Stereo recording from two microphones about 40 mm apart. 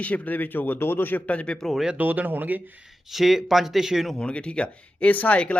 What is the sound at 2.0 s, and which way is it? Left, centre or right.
Speech, right.